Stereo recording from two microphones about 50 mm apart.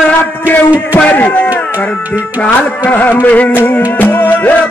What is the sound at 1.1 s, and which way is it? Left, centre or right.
Music, left.